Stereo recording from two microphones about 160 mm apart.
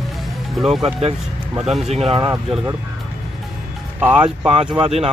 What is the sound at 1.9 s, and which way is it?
Speech, 40° right (ahead or behind).